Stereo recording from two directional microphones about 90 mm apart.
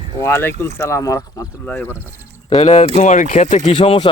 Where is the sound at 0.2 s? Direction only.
30° left (ahead or behind).